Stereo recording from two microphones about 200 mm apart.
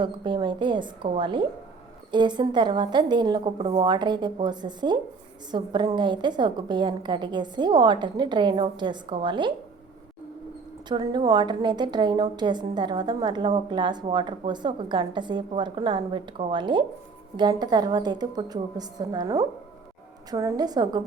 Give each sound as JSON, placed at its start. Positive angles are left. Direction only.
{"t": 0.0, "sound": "a woman's voice", "side_deg": -25}
{"t": 10.8, "sound": "a woman's voice", "side_deg": -20}